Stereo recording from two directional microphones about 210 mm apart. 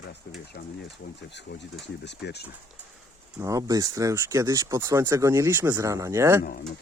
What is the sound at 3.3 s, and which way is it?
Speech, 15° right (ahead or behind).